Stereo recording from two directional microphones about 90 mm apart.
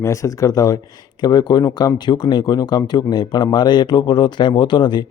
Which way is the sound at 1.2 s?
55° left (ahead or behind).